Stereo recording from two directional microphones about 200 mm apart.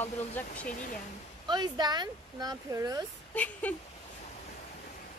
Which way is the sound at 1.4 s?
20° right (ahead or behind).